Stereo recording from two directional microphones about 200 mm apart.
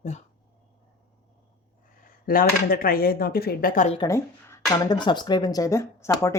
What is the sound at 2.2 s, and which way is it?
Speech, 45° left (ahead or behind).